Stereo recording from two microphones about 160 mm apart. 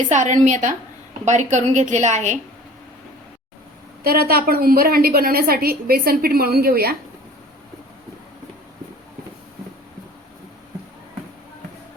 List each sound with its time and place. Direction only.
0.1 s a woman's voice: 50° right (ahead or behind)
4.0 s a woman's voice: 70° right (ahead or behind)